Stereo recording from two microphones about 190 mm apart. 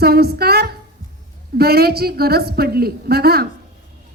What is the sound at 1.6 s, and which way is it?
A woman's voice, 55° right (ahead or behind).